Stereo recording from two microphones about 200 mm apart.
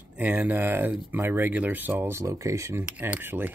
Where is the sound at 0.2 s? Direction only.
10° right (ahead or behind).